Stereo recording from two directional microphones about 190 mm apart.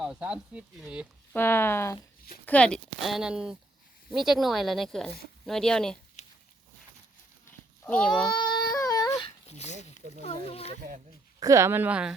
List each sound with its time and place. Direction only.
0.0 s speech: 5° right (ahead or behind)
1.3 s speech: 10° left (ahead or behind)
6.2 s a sound: 35° left (ahead or behind)
7.9 s speech: 5° left (ahead or behind)
8.3 s yodeling: 25° left (ahead or behind)
9.6 s speech: 35° left (ahead or behind)
11.3 s speech: 15° right (ahead or behind)